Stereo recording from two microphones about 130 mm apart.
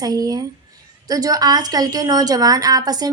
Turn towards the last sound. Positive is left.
turn(degrees=-30)  # may be behind; listen again after turning